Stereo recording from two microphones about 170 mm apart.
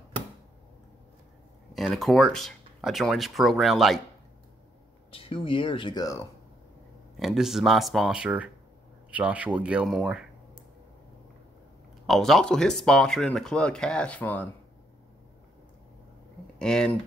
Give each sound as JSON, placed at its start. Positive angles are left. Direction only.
{"t": 1.7, "sound": "speech", "side_deg": 0}
{"t": 5.1, "sound": "speech", "side_deg": 30}
{"t": 7.2, "sound": "speech", "side_deg": 0}
{"t": 12.1, "sound": "speech", "side_deg": 0}
{"t": 16.5, "sound": "speech", "side_deg": 5}